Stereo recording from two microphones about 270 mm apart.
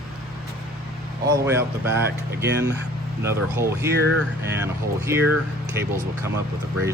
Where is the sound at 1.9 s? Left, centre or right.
Right.